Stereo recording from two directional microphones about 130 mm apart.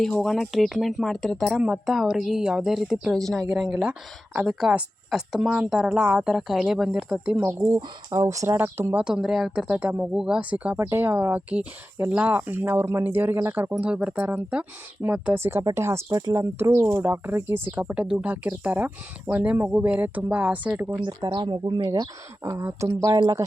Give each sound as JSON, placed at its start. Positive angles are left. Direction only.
{"t": 0.0, "sound": "speech", "side_deg": 5}
{"t": 7.8, "sound": "speech", "side_deg": -25}
{"t": 21.0, "sound": "speech", "side_deg": -30}